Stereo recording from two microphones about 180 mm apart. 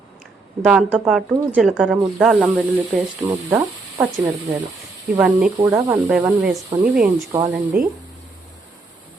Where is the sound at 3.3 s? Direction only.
15° right (ahead or behind).